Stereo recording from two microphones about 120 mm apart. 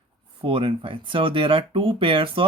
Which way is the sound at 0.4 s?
45° right (ahead or behind).